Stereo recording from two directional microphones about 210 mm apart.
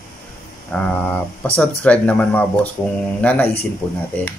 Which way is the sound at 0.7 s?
5° left (ahead or behind).